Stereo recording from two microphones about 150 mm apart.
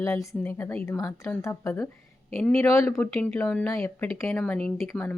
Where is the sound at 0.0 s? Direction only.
20° left (ahead or behind).